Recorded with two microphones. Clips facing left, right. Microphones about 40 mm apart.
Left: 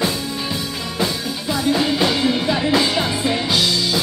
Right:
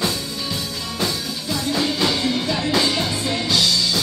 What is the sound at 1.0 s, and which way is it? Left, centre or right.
Music, centre.